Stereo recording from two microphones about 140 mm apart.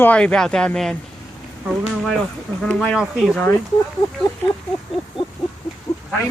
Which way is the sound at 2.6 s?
10° left (ahead or behind).